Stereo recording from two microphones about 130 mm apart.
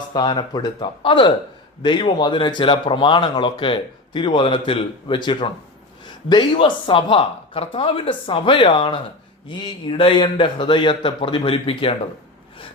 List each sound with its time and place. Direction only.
0.1 s speech: 35° left (ahead or behind)